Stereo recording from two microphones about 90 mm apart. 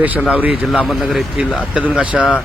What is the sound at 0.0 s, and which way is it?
Speech, 15° right (ahead or behind).